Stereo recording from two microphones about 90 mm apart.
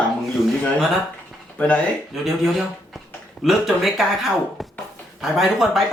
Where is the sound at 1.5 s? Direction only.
15° left (ahead or behind).